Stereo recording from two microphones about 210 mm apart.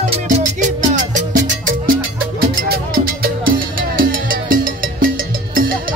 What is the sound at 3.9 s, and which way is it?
Music, 40° right (ahead or behind).